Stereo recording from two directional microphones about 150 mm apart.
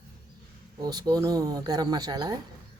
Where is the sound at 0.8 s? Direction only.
25° right (ahead or behind).